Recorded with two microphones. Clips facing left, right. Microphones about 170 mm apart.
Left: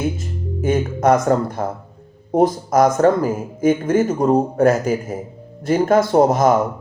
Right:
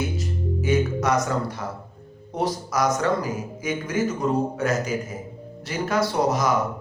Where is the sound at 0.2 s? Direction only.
50° left (ahead or behind).